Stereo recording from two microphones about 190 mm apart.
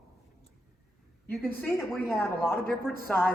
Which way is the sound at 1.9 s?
10° left (ahead or behind).